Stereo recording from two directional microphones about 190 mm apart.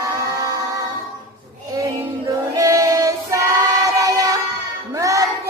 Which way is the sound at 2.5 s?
15° right (ahead or behind).